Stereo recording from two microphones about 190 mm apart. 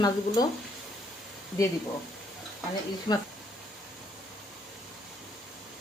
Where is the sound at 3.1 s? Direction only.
30° left (ahead or behind).